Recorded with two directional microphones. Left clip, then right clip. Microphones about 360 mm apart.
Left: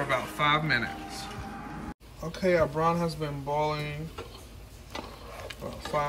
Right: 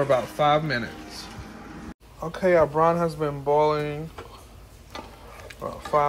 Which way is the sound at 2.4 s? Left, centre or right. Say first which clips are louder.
Right 6 dB; centre.